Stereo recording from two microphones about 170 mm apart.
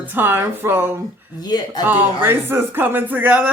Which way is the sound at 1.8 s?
10° right (ahead or behind).